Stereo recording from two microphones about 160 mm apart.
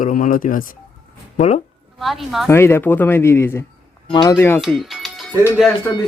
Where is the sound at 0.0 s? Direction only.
55° left (ahead or behind).